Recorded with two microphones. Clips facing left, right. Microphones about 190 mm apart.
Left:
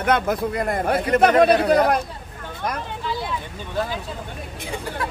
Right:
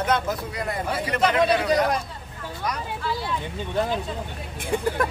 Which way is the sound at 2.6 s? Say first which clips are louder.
Left 2 dB; 50° left (ahead or behind).